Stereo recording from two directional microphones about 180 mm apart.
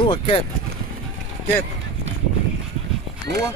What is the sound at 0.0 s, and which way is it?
Speech, 30° left (ahead or behind).